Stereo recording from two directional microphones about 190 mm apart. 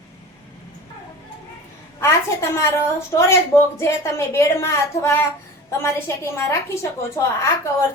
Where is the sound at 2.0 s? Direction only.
15° left (ahead or behind).